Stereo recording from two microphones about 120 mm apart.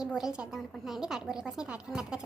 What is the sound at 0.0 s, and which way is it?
A woman's voice, 5° right (ahead or behind).